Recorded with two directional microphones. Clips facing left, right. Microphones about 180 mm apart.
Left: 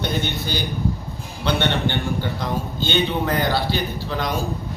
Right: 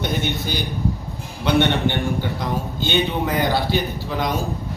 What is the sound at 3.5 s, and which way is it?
Speech, 15° right (ahead or behind).